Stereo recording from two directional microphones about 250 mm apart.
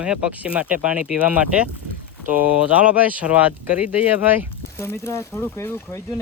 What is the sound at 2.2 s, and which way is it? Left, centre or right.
Speech, right.